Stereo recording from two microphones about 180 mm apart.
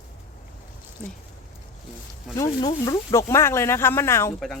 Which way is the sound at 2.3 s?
20° left (ahead or behind).